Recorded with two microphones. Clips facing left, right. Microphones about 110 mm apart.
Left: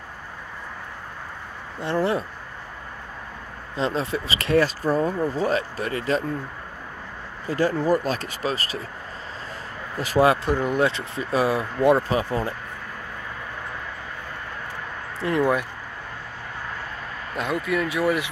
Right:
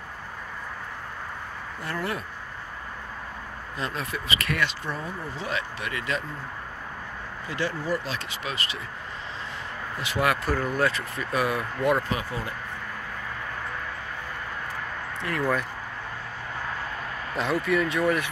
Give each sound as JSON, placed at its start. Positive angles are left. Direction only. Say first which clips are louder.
{"t": 1.8, "sound": "speech", "louder": "left 8 dB", "side_deg": 25}
{"t": 3.7, "sound": "speech", "louder": "left 7 dB", "side_deg": 30}
{"t": 7.4, "sound": "speech", "louder": "left 8 dB", "side_deg": 40}
{"t": 9.9, "sound": "speech", "louder": "left 7 dB", "side_deg": 40}
{"t": 10.5, "sound": "speech", "louder": "left 3 dB", "side_deg": 20}
{"t": 15.2, "sound": "speech", "louder": "left 6 dB", "side_deg": 25}
{"t": 17.4, "sound": "speech", "louder": "even", "side_deg": 0}